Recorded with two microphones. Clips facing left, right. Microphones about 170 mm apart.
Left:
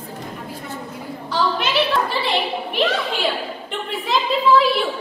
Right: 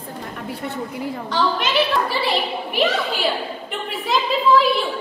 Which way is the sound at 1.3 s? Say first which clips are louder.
Even; centre (ahead or behind).